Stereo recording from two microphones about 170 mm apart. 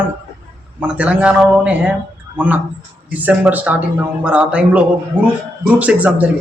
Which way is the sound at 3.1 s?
10° right (ahead or behind).